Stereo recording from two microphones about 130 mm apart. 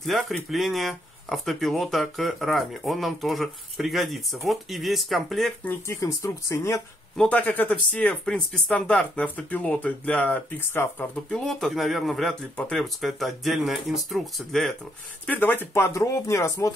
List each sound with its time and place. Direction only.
0.0 s speech: centre (ahead or behind)
5.7 s speech: 20° left (ahead or behind)
7.2 s speech: 10° left (ahead or behind)
11.2 s speech: 5° left (ahead or behind)
15.2 s speech: 15° left (ahead or behind)